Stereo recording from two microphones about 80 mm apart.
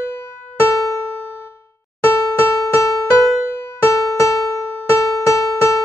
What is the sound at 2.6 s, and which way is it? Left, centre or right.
Music, left.